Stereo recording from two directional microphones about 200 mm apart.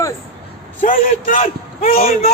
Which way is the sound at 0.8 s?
45° left (ahead or behind).